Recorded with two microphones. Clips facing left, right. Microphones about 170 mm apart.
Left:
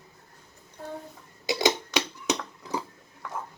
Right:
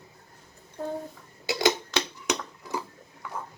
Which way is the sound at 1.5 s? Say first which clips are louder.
Even; 20° left (ahead or behind).